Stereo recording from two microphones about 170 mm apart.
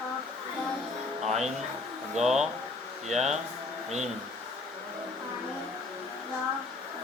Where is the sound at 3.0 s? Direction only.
40° right (ahead or behind).